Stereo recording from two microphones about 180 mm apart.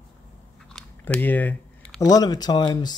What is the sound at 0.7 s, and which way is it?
Biting, 5° left (ahead or behind).